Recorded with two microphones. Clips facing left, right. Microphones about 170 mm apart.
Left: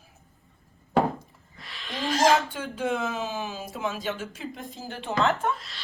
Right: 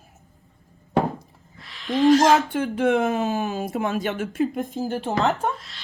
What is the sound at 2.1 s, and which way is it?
Speech, 65° right (ahead or behind).